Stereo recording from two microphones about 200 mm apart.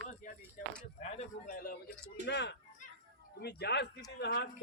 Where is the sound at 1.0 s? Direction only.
40° left (ahead or behind).